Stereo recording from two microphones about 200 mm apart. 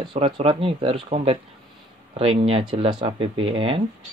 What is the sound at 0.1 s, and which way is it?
Speech, 25° right (ahead or behind).